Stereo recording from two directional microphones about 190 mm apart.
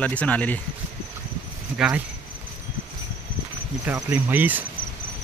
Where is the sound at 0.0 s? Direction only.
5° left (ahead or behind).